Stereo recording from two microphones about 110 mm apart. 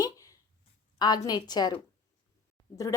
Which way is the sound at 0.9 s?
40° left (ahead or behind).